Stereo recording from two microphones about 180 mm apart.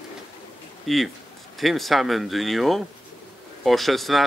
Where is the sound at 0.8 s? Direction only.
Centre (ahead or behind).